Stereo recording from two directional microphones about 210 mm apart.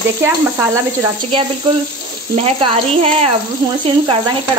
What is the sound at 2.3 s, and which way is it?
Speech, 30° right (ahead or behind).